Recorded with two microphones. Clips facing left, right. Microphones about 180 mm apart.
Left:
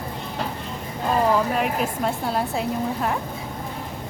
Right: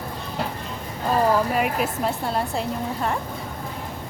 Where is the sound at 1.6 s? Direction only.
5° right (ahead or behind).